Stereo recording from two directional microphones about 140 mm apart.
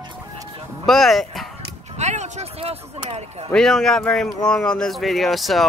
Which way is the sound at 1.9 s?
55° right (ahead or behind).